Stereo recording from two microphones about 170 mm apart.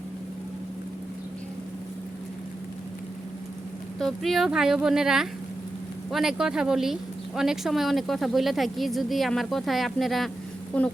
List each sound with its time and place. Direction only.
4.0 s speech: centre (ahead or behind)